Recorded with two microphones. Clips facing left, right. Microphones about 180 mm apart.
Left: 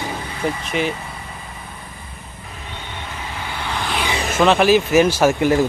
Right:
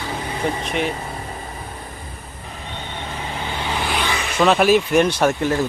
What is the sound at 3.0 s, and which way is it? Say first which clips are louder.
Vehicle: right 3 dB; 25° right (ahead or behind).